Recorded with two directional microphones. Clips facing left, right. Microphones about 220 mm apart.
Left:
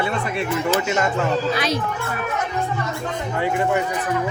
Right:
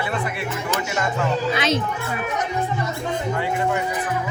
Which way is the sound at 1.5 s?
25° right (ahead or behind).